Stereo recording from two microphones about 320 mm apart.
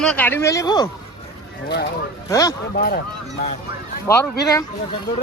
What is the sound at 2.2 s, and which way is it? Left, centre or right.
Speech, centre.